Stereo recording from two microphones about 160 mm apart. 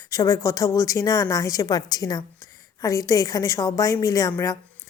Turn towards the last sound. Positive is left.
turn(degrees=20)  # may be behind; listen again after turning